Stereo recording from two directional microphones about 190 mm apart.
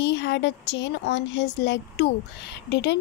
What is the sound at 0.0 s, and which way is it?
Speech, 65° left (ahead or behind).